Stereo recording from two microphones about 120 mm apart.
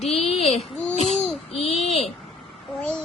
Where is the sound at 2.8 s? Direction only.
10° left (ahead or behind).